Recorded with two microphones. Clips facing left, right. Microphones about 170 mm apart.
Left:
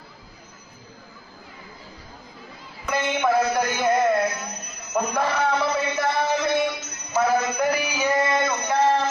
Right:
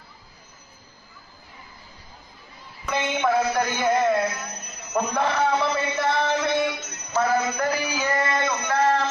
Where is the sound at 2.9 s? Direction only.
Centre (ahead or behind).